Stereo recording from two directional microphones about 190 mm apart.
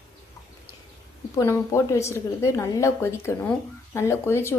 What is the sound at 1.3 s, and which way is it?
A woman's voice, 15° left (ahead or behind).